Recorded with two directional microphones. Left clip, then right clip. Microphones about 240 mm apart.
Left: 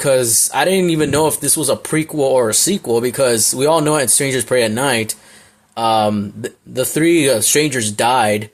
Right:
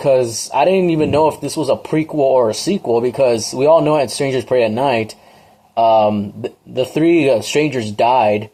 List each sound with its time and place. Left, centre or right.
0.0 s speech: centre
5.8 s speech: centre